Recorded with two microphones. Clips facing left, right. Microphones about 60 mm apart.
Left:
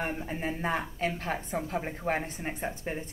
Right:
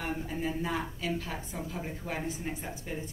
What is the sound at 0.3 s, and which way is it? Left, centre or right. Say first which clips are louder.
A woman's voice: left 1 dB; left.